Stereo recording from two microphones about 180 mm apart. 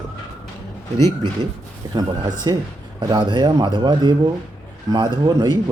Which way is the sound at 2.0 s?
20° right (ahead or behind).